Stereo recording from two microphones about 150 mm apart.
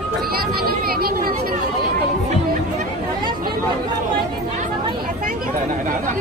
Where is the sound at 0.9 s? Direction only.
85° right.